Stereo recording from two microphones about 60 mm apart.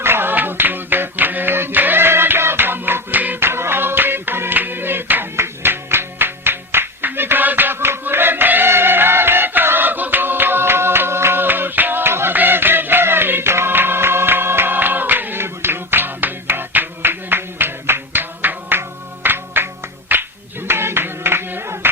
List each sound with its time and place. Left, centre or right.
0.0 s a sound: right
3.5 s music: right
20.1 s clapping: right